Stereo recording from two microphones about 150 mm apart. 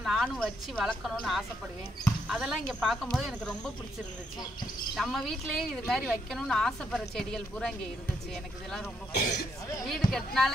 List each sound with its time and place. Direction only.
0.0 s a sound: 5° right (ahead or behind)
0.4 s speech: 5° left (ahead or behind)
4.9 s speech: centre (ahead or behind)
9.1 s speech: 90° left
10.1 s speech: centre (ahead or behind)